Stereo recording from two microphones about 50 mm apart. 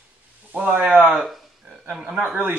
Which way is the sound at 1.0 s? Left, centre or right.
Centre.